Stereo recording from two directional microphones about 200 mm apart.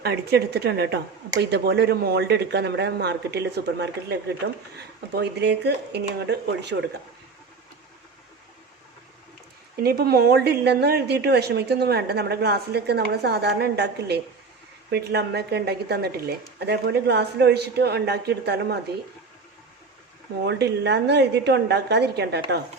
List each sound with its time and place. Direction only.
0.0 s speech: 50° right (ahead or behind)
9.7 s a woman's voice: 50° right (ahead or behind)
20.4 s speech: 55° right (ahead or behind)